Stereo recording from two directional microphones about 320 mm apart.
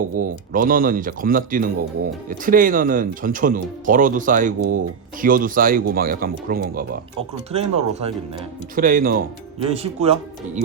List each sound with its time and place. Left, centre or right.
0.2 s speech: right